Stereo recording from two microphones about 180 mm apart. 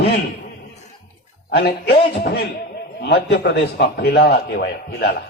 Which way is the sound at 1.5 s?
60° left (ahead or behind).